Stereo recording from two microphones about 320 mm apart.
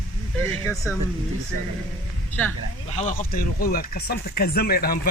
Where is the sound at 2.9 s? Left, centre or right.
Left.